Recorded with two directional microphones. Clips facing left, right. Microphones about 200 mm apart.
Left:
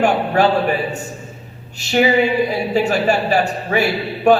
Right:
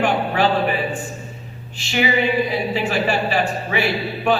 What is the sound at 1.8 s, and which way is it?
A man's voice, 40° left (ahead or behind).